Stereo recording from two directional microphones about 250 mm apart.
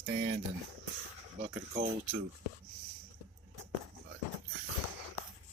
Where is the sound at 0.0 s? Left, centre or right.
Right.